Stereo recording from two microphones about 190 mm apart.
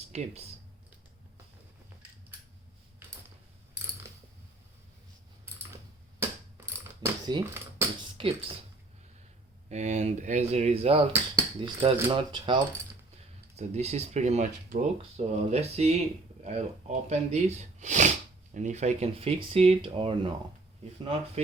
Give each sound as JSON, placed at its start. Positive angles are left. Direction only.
{"t": 0.1, "sound": "speech", "side_deg": -35}
{"t": 3.0, "sound": "a sound", "side_deg": -15}
{"t": 7.0, "sound": "a sound", "side_deg": -15}
{"t": 8.2, "sound": "speech", "side_deg": -30}
{"t": 9.6, "sound": "speech", "side_deg": -35}
{"t": 13.6, "sound": "speech", "side_deg": -35}